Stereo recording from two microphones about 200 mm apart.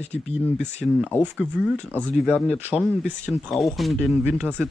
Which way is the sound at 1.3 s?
5° right (ahead or behind).